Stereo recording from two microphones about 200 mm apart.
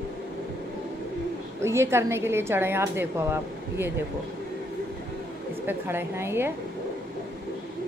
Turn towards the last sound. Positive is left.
turn(degrees=-10)  # may be behind; listen again after turning